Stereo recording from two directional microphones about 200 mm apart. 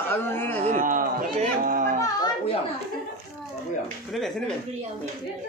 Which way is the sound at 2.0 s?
20° left (ahead or behind).